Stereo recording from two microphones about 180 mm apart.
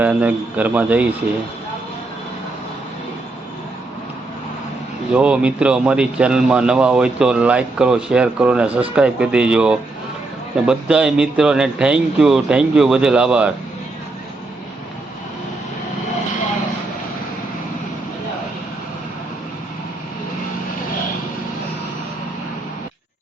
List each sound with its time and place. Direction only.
0.0 s speech: 10° right (ahead or behind)
5.1 s a man's voice: 5° right (ahead or behind)